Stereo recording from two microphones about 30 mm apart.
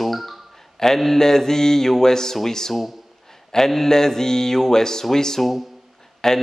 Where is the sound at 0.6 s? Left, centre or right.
Centre.